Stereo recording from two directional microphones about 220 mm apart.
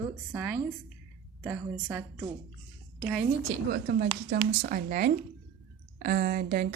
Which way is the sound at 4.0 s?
40° right (ahead or behind).